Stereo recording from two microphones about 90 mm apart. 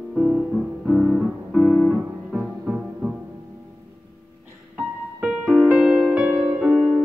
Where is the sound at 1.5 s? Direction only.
15° left (ahead or behind).